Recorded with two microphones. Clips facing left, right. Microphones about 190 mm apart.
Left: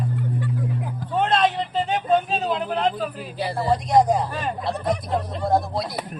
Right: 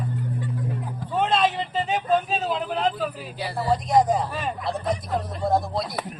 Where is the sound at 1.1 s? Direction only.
Centre (ahead or behind).